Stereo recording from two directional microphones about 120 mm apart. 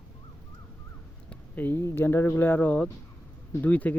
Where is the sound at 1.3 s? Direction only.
15° left (ahead or behind).